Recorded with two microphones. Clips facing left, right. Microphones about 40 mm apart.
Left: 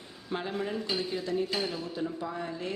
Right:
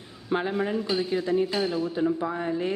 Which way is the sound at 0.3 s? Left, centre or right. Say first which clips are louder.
Right 8 dB; right.